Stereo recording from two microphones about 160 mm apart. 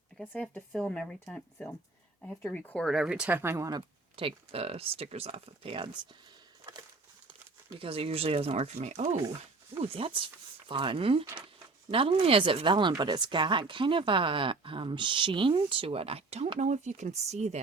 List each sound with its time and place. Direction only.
0.2 s speech: centre (ahead or behind); by 6.0 s 35° right (ahead or behind)
7.8 s speech: 35° right (ahead or behind)